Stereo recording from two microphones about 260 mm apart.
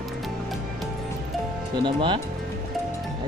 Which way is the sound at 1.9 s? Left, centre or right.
Centre.